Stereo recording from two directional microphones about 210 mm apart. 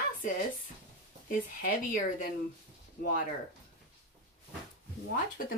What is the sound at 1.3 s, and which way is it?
Speech, 40° left (ahead or behind).